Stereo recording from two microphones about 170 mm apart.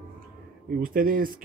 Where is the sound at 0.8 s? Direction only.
55° right (ahead or behind).